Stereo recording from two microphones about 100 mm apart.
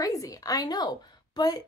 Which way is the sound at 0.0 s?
35° left (ahead or behind).